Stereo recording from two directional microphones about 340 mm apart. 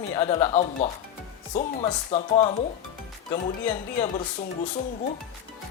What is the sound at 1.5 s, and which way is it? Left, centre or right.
Speech, centre.